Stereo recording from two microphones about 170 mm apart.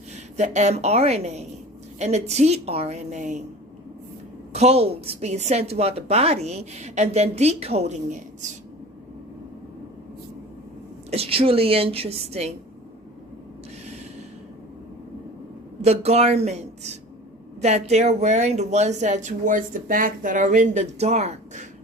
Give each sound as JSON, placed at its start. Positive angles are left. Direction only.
{"t": 0.3, "sound": "a woman's voice", "side_deg": -45}
{"t": 4.5, "sound": "a woman's voice", "side_deg": -40}
{"t": 11.1, "sound": "a woman's voice", "side_deg": -35}
{"t": 15.8, "sound": "a woman's voice", "side_deg": -40}